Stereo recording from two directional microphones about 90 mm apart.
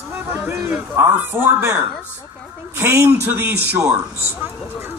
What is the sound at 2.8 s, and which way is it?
Speech, 25° right (ahead or behind).